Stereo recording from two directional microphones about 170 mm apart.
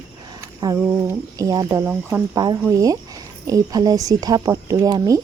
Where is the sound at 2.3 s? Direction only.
25° right (ahead or behind).